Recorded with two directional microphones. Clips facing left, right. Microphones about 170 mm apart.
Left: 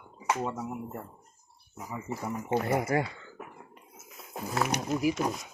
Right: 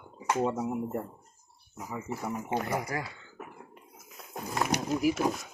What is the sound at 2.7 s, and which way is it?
Speech, 25° left (ahead or behind).